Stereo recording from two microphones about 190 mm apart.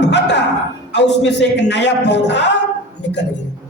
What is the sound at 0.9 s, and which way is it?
Speech, 65° left (ahead or behind).